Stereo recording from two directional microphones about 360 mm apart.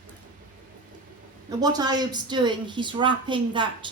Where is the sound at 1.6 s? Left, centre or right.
Centre.